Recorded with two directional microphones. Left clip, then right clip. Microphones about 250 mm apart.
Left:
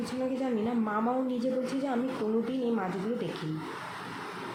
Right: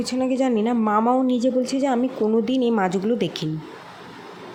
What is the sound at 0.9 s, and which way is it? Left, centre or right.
A woman's voice, right.